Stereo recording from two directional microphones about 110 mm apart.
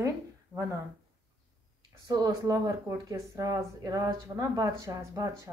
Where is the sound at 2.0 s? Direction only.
35° right (ahead or behind).